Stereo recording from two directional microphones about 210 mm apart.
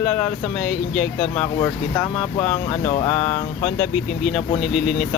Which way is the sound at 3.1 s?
10° left (ahead or behind).